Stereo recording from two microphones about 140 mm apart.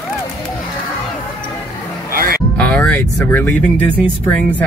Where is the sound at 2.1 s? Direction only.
90° right.